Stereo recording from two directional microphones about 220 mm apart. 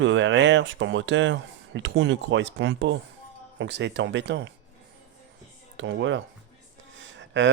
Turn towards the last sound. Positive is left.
turn(degrees=-55)  # may be behind; listen again after turning